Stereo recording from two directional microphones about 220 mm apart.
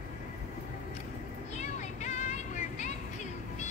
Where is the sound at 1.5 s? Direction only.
30° left (ahead or behind).